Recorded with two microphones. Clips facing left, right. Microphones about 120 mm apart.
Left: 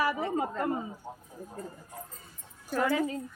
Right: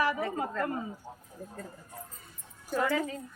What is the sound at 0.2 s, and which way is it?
Speech, 20° left (ahead or behind).